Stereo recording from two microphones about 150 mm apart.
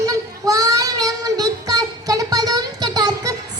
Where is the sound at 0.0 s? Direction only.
25° right (ahead or behind).